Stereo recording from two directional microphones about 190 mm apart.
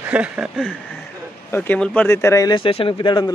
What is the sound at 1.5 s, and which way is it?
Speech, 5° left (ahead or behind).